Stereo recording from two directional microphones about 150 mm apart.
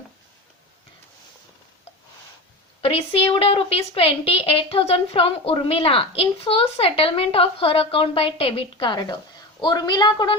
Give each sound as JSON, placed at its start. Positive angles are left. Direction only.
{"t": 2.8, "sound": "a woman's voice", "side_deg": 40}